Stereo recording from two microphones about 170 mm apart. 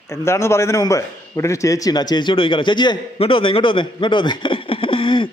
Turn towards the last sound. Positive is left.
turn(degrees=30)  # may be behind; listen again after turning